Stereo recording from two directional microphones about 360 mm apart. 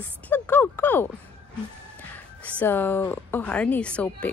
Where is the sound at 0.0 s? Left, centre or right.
Centre.